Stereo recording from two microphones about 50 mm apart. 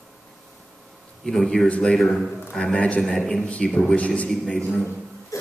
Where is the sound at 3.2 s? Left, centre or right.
Centre.